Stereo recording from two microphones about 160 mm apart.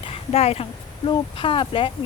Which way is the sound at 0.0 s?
40° left (ahead or behind).